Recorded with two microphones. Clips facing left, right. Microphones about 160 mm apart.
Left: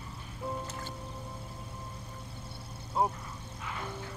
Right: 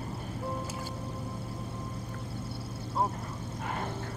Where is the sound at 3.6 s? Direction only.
50° right (ahead or behind).